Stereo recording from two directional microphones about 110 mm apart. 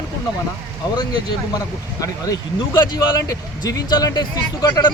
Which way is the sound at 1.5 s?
30° left (ahead or behind).